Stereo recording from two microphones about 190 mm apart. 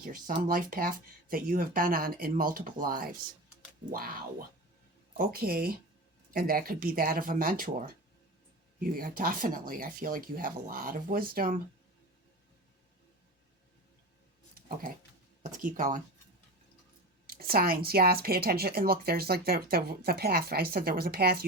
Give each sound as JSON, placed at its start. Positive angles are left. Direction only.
{"t": 0.0, "sound": "speech", "side_deg": -50}
{"t": 5.1, "sound": "speech", "side_deg": -50}
{"t": 15.5, "sound": "speech", "side_deg": -45}
{"t": 17.2, "sound": "speech", "side_deg": -50}